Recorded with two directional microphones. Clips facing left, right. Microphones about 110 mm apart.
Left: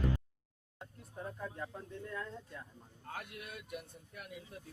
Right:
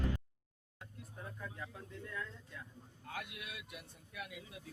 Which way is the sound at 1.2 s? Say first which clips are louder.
Left 5 dB; 30° left (ahead or behind).